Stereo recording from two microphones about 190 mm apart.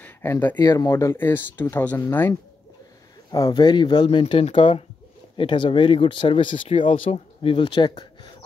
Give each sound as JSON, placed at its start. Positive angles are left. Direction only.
{"t": 0.0, "sound": "speech", "side_deg": 10}